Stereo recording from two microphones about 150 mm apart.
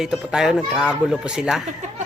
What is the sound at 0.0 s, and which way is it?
Speech, 5° right (ahead or behind).